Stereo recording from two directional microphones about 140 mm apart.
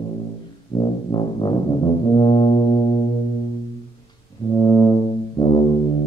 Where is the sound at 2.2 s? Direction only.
45° left (ahead or behind).